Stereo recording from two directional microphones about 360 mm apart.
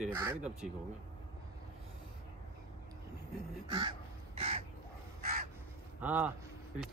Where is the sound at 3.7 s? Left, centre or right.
Centre.